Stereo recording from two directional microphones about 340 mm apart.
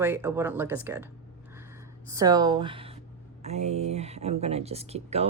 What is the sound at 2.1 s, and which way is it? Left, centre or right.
A woman's voice, centre.